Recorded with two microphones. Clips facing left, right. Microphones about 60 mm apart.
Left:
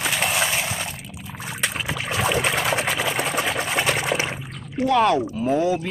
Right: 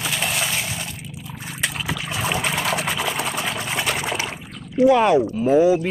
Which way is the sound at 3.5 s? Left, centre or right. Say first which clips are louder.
Left 2 dB; left.